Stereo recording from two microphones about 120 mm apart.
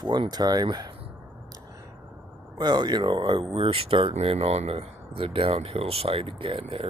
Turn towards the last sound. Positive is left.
turn(degrees=-50)  # may be behind; listen again after turning